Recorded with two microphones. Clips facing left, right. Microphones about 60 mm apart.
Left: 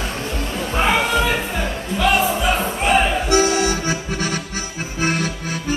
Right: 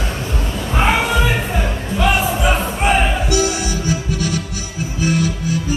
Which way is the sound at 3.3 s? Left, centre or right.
Left.